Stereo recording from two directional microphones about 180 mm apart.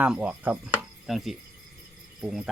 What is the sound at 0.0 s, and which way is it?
Speech, 5° right (ahead or behind).